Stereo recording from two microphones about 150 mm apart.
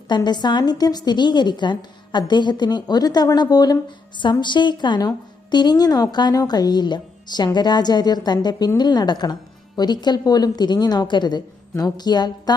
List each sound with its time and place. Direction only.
0.1 s a woman's voice: 30° left (ahead or behind)